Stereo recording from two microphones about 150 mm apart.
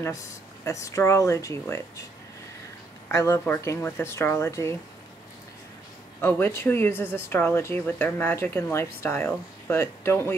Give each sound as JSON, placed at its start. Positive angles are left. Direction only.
{"t": 0.7, "sound": "speech", "side_deg": 20}
{"t": 3.1, "sound": "speech", "side_deg": 20}
{"t": 6.2, "sound": "speech", "side_deg": 15}